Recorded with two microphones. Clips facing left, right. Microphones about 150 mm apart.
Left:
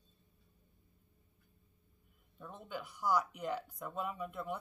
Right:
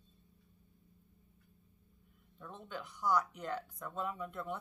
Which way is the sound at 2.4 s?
10° left (ahead or behind).